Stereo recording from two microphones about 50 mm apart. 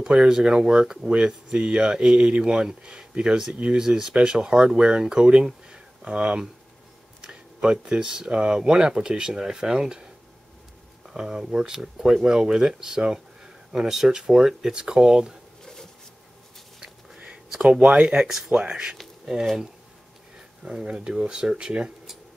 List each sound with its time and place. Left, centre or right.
0.0 s speech: centre
11.1 s speech: centre
15.6 s a sound: centre
17.6 s speech: right
18.1 s speech: centre
20.6 s speech: centre